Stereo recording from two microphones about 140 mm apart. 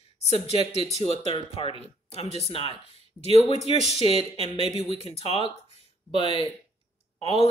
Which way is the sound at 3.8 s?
45° left (ahead or behind).